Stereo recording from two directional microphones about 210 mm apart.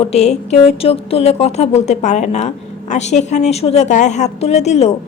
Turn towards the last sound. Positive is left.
turn(degrees=30)  # may be behind; listen again after turning